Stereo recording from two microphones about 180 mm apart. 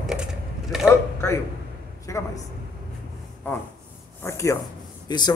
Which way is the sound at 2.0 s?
20° left (ahead or behind).